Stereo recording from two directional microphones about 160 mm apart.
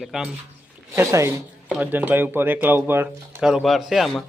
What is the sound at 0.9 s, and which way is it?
Speech, 15° right (ahead or behind).